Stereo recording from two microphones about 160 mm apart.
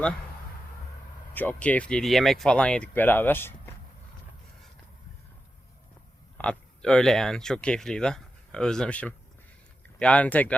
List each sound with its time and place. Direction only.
1.3 s speech: 10° left (ahead or behind)
6.3 s speech: 5° left (ahead or behind)